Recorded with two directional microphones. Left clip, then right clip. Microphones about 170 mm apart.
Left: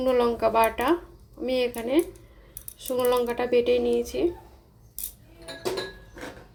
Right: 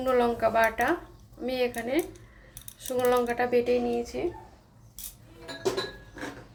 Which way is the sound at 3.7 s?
50° left (ahead or behind).